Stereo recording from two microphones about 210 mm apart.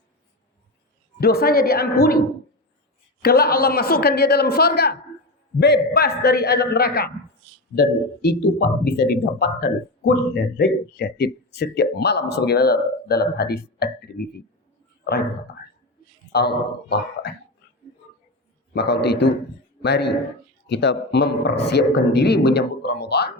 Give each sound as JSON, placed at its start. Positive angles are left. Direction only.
{"t": 1.2, "sound": "speech", "side_deg": 45}
{"t": 16.3, "sound": "speech", "side_deg": 50}
{"t": 18.7, "sound": "speech", "side_deg": 50}